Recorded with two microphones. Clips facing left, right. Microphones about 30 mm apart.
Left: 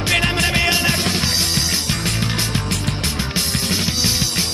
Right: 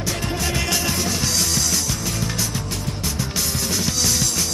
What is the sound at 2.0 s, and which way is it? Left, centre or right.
Music, left.